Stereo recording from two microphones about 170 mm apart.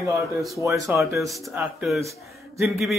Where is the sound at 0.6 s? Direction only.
20° right (ahead or behind).